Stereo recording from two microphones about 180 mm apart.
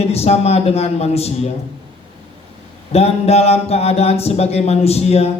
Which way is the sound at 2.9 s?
35° left (ahead or behind).